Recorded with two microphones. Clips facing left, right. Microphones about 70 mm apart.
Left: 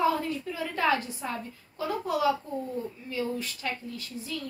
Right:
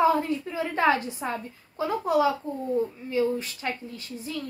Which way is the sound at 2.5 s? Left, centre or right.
Right.